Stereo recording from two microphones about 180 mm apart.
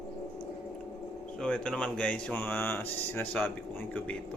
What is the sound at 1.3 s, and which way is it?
Speech, 5° left (ahead or behind).